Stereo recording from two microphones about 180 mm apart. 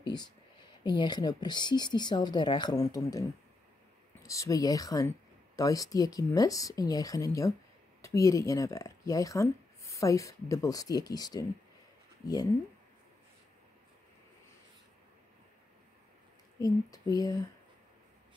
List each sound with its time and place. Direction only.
0.0 s speech: 25° left (ahead or behind)
4.3 s speech: 20° left (ahead or behind)
16.5 s speech: 20° left (ahead or behind)